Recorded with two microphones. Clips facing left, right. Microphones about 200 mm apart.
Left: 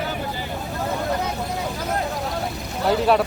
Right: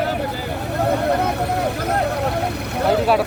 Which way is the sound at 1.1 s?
65° right (ahead or behind).